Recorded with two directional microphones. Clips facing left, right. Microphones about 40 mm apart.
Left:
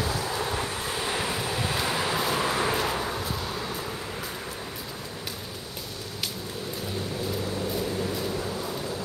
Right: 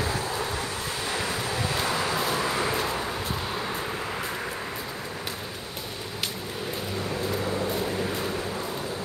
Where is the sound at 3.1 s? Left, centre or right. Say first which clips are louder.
Right 1 dB; centre.